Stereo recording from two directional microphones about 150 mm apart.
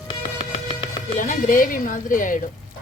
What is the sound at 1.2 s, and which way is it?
Speech, 60° left (ahead or behind).